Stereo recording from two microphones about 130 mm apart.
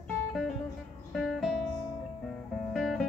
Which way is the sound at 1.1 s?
Centre (ahead or behind).